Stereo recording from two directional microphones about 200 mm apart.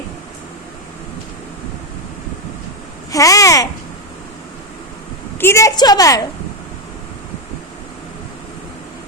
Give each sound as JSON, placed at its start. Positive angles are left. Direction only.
{"t": 3.1, "sound": "babbling", "side_deg": 15}
{"t": 5.4, "sound": "a woman's voice", "side_deg": 15}